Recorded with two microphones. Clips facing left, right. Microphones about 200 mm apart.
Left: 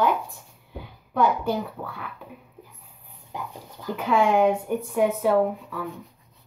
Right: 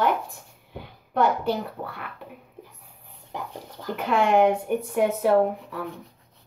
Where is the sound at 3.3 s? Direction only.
70° right (ahead or behind).